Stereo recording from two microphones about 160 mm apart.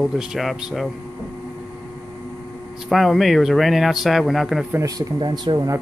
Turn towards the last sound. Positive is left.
turn(degrees=-25)  # may be behind; listen again after turning